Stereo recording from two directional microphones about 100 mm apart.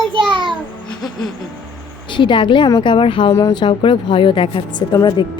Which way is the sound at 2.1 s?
50° left (ahead or behind).